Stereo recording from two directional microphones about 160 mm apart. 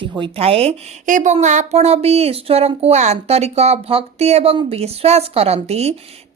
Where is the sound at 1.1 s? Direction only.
55° right (ahead or behind).